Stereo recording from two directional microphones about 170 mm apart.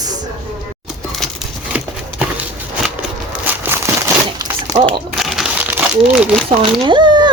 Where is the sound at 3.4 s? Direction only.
15° right (ahead or behind).